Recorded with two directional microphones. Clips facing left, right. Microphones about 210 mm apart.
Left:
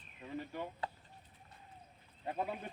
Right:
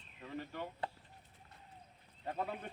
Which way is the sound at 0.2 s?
15° left (ahead or behind).